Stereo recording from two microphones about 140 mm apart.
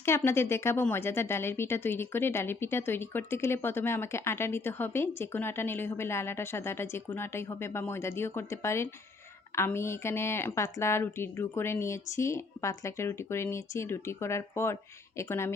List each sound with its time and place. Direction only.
0.0 s speech: 20° left (ahead or behind)